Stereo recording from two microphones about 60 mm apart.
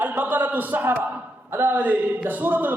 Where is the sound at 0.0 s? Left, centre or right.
Right.